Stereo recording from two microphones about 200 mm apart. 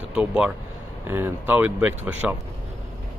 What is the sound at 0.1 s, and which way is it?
Speech, 5° right (ahead or behind).